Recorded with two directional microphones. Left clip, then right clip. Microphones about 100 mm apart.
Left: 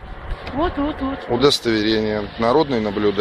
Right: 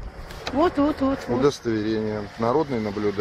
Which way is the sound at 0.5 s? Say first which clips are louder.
Right 1 dB; 5° left (ahead or behind).